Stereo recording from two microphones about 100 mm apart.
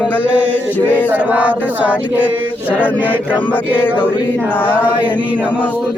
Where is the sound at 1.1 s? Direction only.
15° right (ahead or behind).